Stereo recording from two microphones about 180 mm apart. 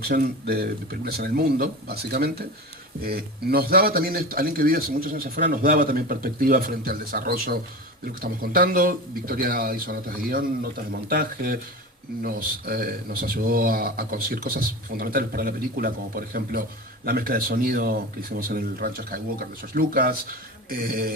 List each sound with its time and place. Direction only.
0.0 s a man's voice: 60° right (ahead or behind)